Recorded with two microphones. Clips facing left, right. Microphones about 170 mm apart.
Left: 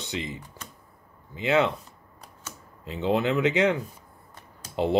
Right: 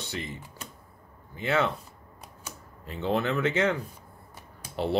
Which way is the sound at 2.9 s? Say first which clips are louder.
Left 3 dB; 15° left (ahead or behind).